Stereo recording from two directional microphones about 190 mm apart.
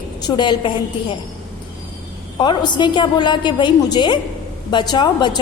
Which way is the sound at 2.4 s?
25° left (ahead or behind).